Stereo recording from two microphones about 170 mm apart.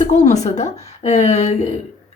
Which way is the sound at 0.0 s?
45° left (ahead or behind).